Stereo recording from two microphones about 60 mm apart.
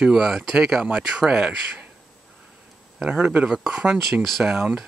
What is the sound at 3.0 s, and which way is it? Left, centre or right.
Speech, centre.